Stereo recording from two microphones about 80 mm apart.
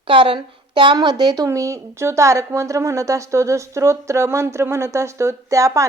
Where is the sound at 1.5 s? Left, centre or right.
Right.